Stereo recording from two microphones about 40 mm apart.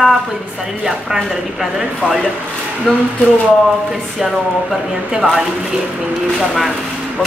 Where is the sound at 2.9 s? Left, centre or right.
Centre.